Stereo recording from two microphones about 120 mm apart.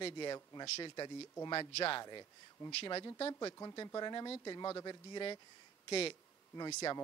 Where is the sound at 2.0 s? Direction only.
35° left (ahead or behind).